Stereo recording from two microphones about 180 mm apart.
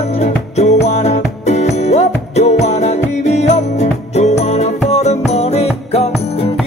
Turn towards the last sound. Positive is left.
turn(degrees=35)  # may be behind; listen again after turning